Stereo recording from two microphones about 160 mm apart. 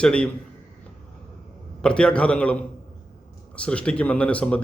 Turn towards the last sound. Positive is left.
turn(degrees=10)  # may be behind; listen again after turning